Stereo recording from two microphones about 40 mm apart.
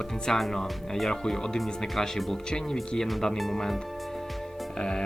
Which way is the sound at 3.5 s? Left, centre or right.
Centre.